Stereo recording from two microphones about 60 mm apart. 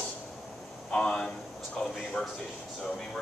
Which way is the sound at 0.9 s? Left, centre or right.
Centre.